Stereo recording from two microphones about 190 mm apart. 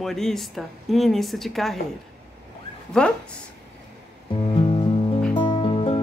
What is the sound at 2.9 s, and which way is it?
Speech, 5° left (ahead or behind).